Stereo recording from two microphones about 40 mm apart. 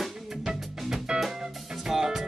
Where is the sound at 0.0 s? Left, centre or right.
Centre.